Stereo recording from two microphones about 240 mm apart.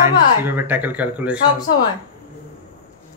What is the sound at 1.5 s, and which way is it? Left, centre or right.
Speech, centre.